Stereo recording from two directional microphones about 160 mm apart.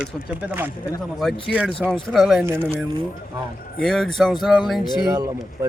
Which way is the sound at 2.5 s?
15° right (ahead or behind).